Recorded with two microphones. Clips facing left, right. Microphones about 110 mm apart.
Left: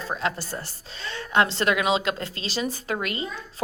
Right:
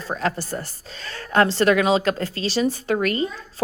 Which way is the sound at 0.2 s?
40° right (ahead or behind).